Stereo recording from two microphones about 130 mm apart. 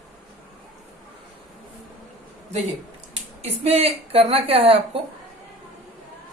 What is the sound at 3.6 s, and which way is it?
A woman's voice, 50° right (ahead or behind).